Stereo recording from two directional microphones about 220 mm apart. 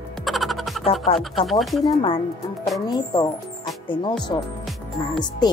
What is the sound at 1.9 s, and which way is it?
Speech, 25° left (ahead or behind).